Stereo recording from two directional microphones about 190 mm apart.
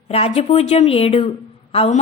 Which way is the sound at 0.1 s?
30° left (ahead or behind).